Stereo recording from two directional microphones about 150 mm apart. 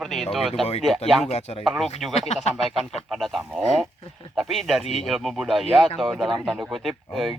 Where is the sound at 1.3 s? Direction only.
45° left (ahead or behind).